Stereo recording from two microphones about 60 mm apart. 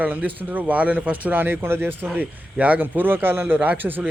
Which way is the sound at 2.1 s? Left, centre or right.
Right.